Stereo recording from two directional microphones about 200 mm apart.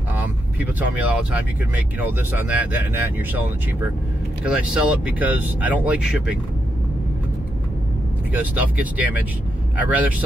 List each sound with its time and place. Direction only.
0.1 s vehicle: 10° right (ahead or behind)
2.0 s speech: 10° right (ahead or behind)
8.3 s speech: 5° right (ahead or behind)